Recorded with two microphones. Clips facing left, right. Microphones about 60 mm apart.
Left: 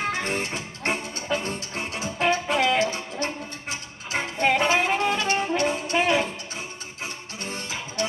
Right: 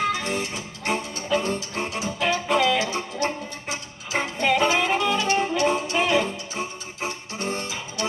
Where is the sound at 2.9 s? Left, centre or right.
Right.